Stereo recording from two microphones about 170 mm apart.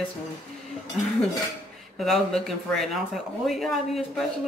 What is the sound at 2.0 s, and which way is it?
Speech, centre (ahead or behind).